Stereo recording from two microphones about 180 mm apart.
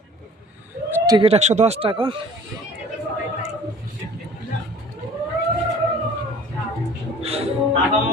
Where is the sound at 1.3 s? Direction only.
40° right (ahead or behind).